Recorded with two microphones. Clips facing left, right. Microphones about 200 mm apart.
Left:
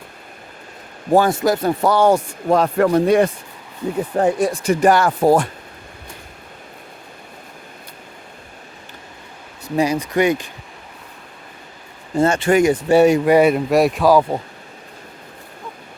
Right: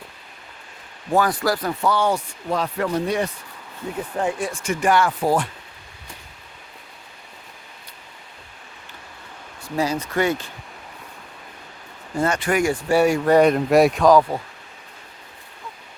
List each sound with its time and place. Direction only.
1.1 s speech: 25° left (ahead or behind)
1.8 s speech: 40° left (ahead or behind)
4.2 s speech: 40° left (ahead or behind)
9.7 s speech: 15° left (ahead or behind)
12.1 s speech: 25° left (ahead or behind); by 14.3 s 5° left (ahead or behind)